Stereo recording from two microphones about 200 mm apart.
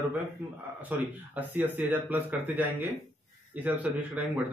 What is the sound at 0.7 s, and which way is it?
Speech, 10° right (ahead or behind).